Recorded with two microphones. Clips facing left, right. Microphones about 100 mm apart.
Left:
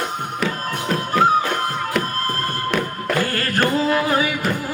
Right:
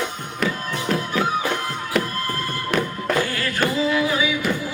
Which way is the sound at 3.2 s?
50° left (ahead or behind).